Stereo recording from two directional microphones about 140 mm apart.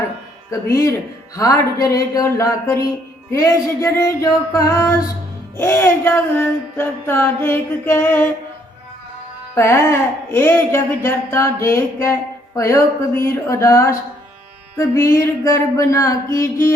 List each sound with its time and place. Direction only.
0.5 s speech: 20° left (ahead or behind)
5.5 s music: 15° left (ahead or behind)
9.6 s speech: 20° left (ahead or behind)